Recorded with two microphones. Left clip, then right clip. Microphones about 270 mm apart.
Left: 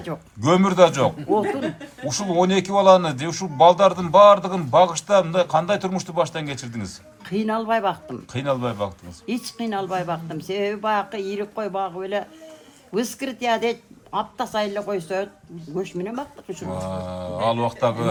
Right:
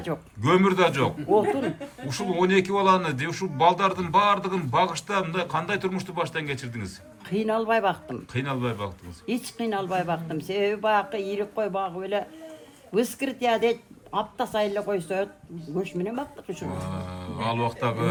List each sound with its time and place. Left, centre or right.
0.4 s speech: centre
1.3 s speech: centre
2.0 s speech: centre
7.3 s speech: centre
8.3 s speech: centre
9.2 s speech: centre
16.8 s speech: centre